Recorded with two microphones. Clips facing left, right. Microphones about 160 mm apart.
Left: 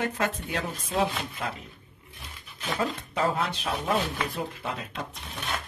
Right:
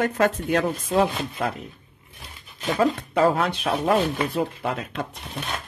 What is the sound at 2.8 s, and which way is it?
Speech, 60° right (ahead or behind).